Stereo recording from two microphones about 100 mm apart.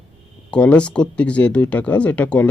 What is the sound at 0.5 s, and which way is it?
Speech, 10° left (ahead or behind).